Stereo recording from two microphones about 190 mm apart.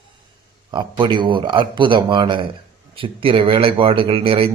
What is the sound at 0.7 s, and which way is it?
Speech, 25° right (ahead or behind).